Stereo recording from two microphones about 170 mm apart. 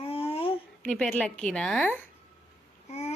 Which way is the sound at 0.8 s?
5° left (ahead or behind).